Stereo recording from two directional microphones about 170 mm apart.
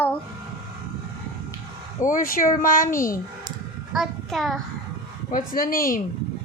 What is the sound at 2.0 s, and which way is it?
Speech, 55° left (ahead or behind).